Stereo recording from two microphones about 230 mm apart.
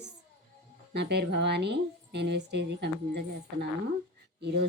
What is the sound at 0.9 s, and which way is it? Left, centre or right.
A woman's voice, right.